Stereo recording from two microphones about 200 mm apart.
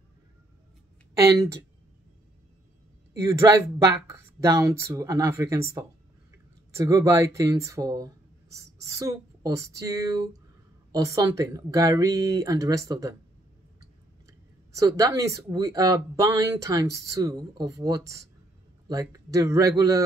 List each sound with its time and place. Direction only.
1.1 s speech: 15° right (ahead or behind)
3.3 s speech: 15° right (ahead or behind)